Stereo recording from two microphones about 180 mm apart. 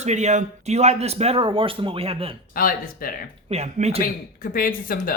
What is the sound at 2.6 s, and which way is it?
Speech, 55° left (ahead or behind).